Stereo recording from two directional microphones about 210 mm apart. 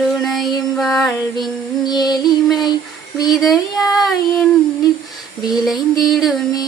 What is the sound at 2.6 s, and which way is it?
Child singing, 20° left (ahead or behind).